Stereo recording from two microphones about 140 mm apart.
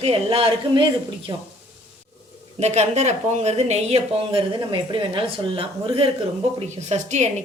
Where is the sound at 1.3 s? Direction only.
25° right (ahead or behind).